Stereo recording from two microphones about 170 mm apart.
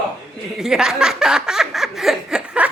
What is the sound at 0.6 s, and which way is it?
Chuckle, 5° right (ahead or behind).